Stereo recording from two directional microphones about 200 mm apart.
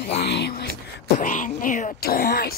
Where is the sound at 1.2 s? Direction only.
40° left (ahead or behind).